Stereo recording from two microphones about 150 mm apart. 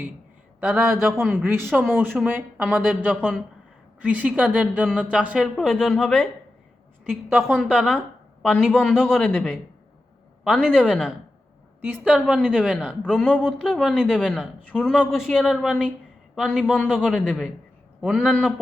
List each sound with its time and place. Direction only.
0.6 s speech: centre (ahead or behind)
1.5 s speech: 15° right (ahead or behind); by 6.2 s centre (ahead or behind)
7.3 s speech: 5° left (ahead or behind)
7.7 s speech: 10° right (ahead or behind)
9.0 s speech: centre (ahead or behind)
10.7 s speech: 5° right (ahead or behind)